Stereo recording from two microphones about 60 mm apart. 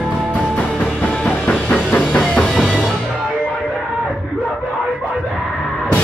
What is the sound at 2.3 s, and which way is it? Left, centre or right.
Music, centre.